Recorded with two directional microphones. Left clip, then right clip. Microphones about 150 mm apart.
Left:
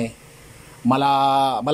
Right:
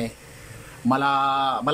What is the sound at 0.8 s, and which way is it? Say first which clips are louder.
Speech: left 3 dB; 25° left (ahead or behind).